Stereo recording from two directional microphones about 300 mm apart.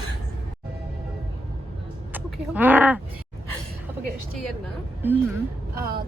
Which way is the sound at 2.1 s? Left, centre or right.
Centre.